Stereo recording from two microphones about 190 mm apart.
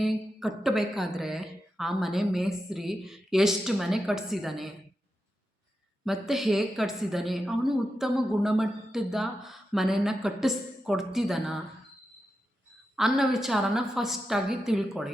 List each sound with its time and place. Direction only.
0.0 s a woman's voice: centre (ahead or behind)
6.1 s a woman's voice: centre (ahead or behind)
13.0 s a woman's voice: centre (ahead or behind)